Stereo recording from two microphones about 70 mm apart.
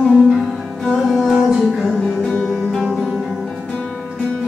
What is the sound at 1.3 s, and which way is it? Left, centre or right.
Music, centre.